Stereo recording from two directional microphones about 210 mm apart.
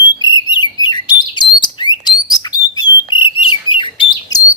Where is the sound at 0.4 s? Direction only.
20° left (ahead or behind).